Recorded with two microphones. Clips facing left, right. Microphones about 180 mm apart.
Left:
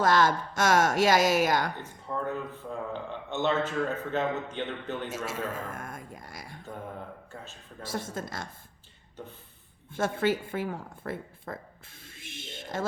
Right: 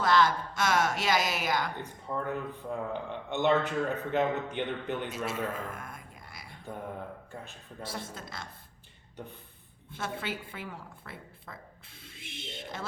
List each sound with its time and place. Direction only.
0.0 s speech: 45° left (ahead or behind)
2.3 s a man's voice: 15° right (ahead or behind)
5.1 s a sound: 45° left (ahead or behind)
7.9 s a woman's voice: 50° left (ahead or behind)
9.9 s a woman's voice: 50° left (ahead or behind)
12.0 s a sound: 50° left (ahead or behind)